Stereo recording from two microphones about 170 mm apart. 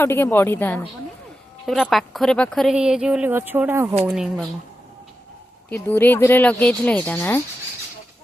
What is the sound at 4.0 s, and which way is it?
Speech, centre (ahead or behind).